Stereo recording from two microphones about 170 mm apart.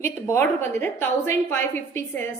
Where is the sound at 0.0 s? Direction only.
15° left (ahead or behind).